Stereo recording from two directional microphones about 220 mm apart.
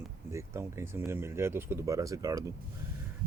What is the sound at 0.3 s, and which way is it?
Speech, 15° right (ahead or behind).